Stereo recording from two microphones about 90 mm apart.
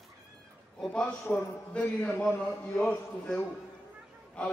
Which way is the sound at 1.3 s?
10° left (ahead or behind).